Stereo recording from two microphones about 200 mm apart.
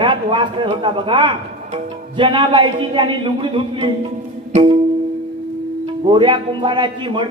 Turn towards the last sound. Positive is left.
turn(degrees=-25)  # may be behind; listen again after turning